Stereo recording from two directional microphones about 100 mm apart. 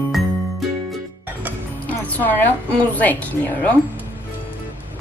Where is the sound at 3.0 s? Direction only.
15° left (ahead or behind).